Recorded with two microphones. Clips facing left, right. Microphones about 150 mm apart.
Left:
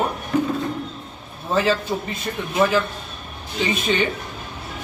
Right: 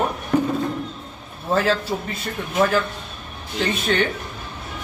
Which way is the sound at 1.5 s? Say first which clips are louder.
Even; centre (ahead or behind).